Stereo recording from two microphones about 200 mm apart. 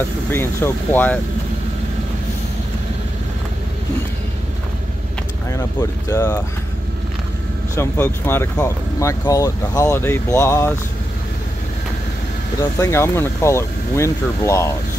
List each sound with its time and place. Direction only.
0.3 s speech: 10° left (ahead or behind)
5.5 s speech: 15° left (ahead or behind)
7.7 s speech: 10° left (ahead or behind)
12.7 s speech: 15° left (ahead or behind)